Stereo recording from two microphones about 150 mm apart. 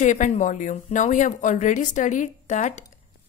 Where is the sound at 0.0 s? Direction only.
55° left (ahead or behind).